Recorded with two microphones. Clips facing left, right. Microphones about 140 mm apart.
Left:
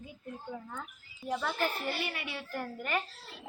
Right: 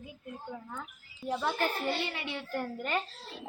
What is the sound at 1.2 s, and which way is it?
A woman's voice, 20° right (ahead or behind).